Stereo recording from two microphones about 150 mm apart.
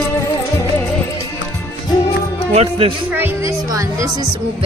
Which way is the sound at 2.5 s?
40° right (ahead or behind).